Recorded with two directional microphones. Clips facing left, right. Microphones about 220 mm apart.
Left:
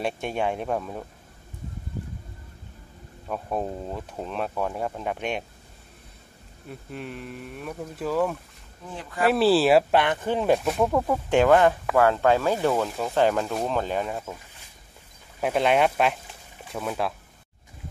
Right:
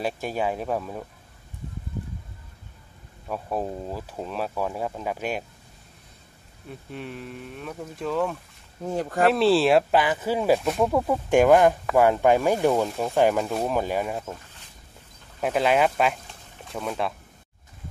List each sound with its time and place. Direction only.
0.0 s speech: centre (ahead or behind)
3.3 s speech: centre (ahead or behind)
6.7 s speech: centre (ahead or behind)
8.8 s speech: 45° right (ahead or behind)
9.3 s speech: centre (ahead or behind); by 12.9 s 15° right (ahead or behind)
12.9 s speech: centre (ahead or behind)
15.4 s speech: centre (ahead or behind)